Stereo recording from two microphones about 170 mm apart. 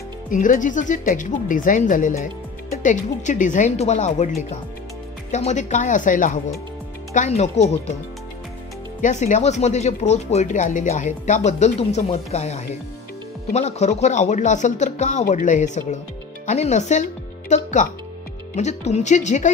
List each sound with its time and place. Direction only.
0.3 s speech: 50° left (ahead or behind)
5.3 s speech: 45° left (ahead or behind)
7.2 s speech: 40° left (ahead or behind)
9.0 s speech: 45° left (ahead or behind)